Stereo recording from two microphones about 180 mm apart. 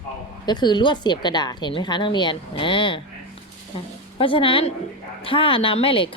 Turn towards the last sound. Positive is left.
turn(degrees=30)  # may be behind; listen again after turning